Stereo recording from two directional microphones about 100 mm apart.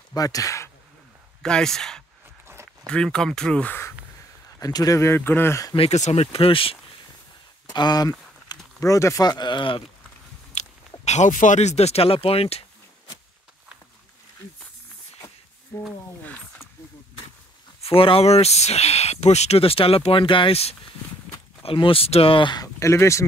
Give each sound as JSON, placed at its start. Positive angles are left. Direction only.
{"t": 0.1, "sound": "speech", "side_deg": 35}
{"t": 1.4, "sound": "speech", "side_deg": 5}
{"t": 2.4, "sound": "a sound", "side_deg": -25}
{"t": 2.9, "sound": "speech", "side_deg": 10}
{"t": 4.6, "sound": "speech", "side_deg": 40}
{"t": 5.8, "sound": "speech", "side_deg": 75}
{"t": 7.7, "sound": "a sound", "side_deg": 45}
{"t": 8.7, "sound": "speech", "side_deg": 35}
{"t": 11.7, "sound": "speech", "side_deg": 90}
{"t": 17.8, "sound": "speech", "side_deg": 70}
{"t": 21.6, "sound": "speech", "side_deg": 65}
{"t": 22.5, "sound": "speech", "side_deg": 40}
{"t": 22.8, "sound": "speech", "side_deg": 30}